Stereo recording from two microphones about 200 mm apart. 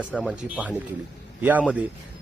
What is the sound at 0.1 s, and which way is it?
Speech, centre (ahead or behind).